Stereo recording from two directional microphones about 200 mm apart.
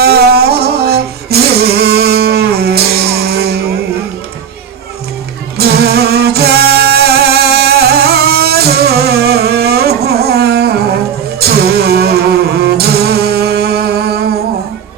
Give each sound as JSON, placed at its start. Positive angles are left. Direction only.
{"t": 0.0, "sound": "music", "side_deg": -50}
{"t": 5.5, "sound": "music", "side_deg": -50}